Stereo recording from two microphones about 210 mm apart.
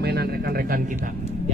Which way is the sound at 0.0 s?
50° right (ahead or behind).